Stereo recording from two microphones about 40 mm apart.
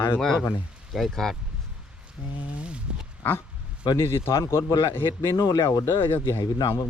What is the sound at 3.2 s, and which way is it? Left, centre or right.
Dog, left.